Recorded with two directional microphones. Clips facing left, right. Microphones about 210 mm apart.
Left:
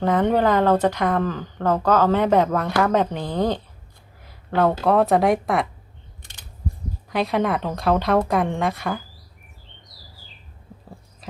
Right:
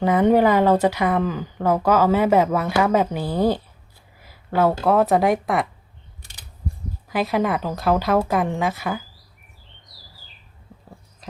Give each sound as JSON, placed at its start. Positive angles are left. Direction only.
{"t": 0.0, "sound": "speech", "side_deg": -10}
{"t": 7.1, "sound": "speech", "side_deg": 0}